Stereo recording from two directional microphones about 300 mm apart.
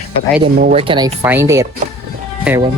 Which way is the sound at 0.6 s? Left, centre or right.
Right.